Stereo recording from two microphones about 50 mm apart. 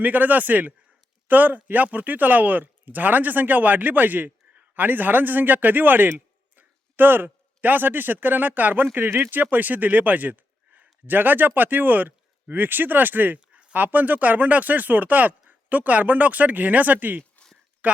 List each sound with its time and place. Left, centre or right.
0.0 s speech: right